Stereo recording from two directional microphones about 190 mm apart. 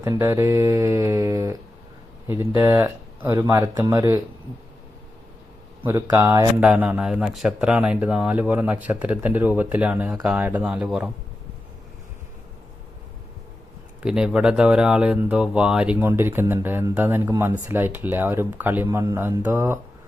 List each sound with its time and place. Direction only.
0.0 s speech: 15° right (ahead or behind)
5.8 s speech: 15° right (ahead or behind)
6.6 s speech: 5° right (ahead or behind)
14.0 s speech: 5° right (ahead or behind)